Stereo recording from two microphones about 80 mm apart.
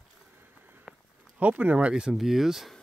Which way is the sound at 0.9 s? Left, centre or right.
Centre.